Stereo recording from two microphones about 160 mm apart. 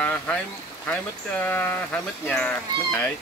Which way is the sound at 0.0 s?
10° left (ahead or behind).